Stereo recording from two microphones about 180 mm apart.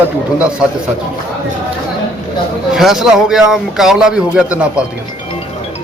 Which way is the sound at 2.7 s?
Centre (ahead or behind).